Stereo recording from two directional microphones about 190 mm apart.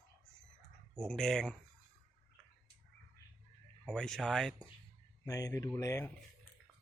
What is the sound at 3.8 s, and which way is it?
Speech, 5° left (ahead or behind).